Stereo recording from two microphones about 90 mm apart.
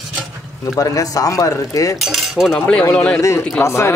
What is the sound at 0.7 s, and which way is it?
Speech, 40° left (ahead or behind).